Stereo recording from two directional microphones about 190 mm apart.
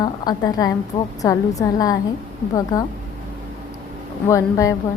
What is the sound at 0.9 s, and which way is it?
Speech, 35° left (ahead or behind).